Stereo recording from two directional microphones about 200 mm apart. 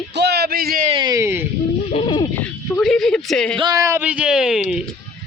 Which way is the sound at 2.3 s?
5° left (ahead or behind).